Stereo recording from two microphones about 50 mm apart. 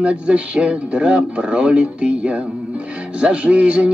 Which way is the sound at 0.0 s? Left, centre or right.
Right.